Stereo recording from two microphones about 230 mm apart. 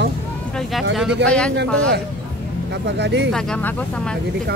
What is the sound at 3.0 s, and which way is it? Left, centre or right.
Speech, right.